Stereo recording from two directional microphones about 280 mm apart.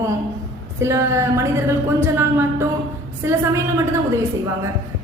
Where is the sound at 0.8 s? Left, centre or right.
Centre.